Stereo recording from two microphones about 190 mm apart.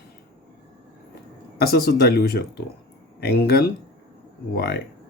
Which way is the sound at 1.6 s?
55° left (ahead or behind).